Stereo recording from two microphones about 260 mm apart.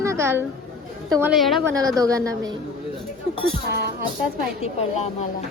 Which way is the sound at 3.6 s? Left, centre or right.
Right.